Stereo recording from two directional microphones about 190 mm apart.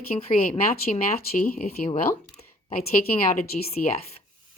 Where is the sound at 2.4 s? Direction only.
30° left (ahead or behind).